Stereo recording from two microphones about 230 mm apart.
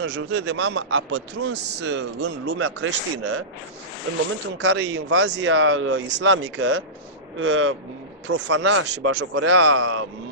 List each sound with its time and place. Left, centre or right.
0.0 s a man's voice: right
4.6 s a man's voice: right